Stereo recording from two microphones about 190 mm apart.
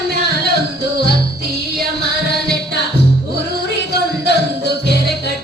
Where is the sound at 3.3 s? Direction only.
60° left (ahead or behind).